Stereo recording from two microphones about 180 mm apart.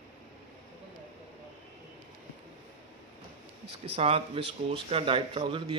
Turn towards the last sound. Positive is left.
turn(degrees=-30)  # may be behind; listen again after turning